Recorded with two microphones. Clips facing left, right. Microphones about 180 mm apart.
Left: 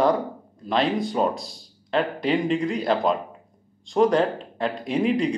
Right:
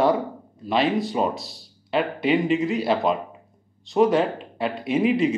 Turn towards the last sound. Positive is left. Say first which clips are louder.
# right 2 dB
turn(degrees=-5)  # may be behind; listen again after turning